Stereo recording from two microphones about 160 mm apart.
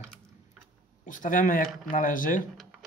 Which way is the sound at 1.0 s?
55° left (ahead or behind).